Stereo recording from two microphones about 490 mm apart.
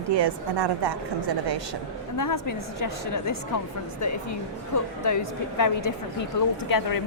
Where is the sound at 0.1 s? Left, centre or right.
Right.